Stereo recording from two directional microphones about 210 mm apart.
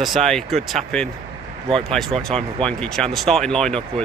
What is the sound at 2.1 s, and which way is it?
Speech, 25° right (ahead or behind).